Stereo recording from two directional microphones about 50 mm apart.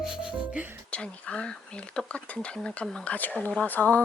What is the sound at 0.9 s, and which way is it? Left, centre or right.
Speech, left.